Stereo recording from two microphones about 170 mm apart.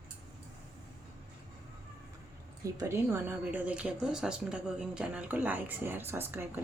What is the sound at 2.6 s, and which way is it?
Speech, 15° right (ahead or behind).